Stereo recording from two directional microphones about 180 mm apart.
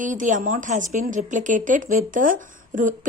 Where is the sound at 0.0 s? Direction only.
45° right (ahead or behind).